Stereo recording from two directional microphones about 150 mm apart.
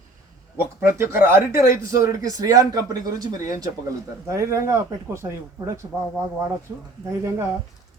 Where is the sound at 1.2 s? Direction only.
20° right (ahead or behind).